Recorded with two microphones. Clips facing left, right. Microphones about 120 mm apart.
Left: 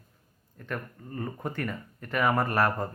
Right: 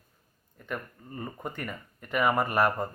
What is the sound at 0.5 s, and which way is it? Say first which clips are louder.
Speech: left 1 dB; 5° right (ahead or behind).